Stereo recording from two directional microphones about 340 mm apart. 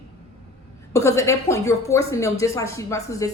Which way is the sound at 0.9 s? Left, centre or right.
Centre.